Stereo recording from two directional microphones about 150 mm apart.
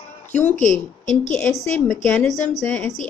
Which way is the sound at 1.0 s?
55° left (ahead or behind).